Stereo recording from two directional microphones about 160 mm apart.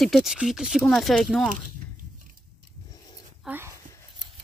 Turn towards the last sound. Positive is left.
turn(degrees=-10)  # may be behind; listen again after turning